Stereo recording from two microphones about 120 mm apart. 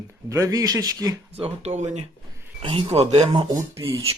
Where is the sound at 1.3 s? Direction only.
60° right (ahead or behind).